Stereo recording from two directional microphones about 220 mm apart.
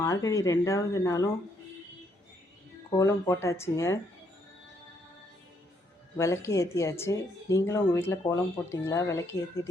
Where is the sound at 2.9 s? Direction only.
15° left (ahead or behind).